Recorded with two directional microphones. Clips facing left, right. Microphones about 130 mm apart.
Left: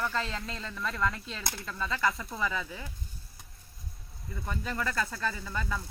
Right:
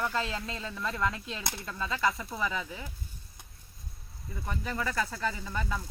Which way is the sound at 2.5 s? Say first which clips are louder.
Even; 15° right (ahead or behind).